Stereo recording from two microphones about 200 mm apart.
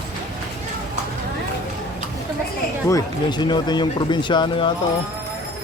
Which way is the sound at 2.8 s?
20° left (ahead or behind).